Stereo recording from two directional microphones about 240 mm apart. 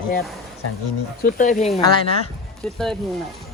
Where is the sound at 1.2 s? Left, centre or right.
Left.